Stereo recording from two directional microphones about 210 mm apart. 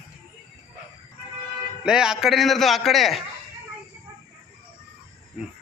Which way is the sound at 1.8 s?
5° right (ahead or behind).